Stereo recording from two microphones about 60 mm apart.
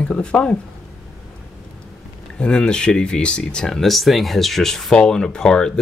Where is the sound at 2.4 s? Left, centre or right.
Centre.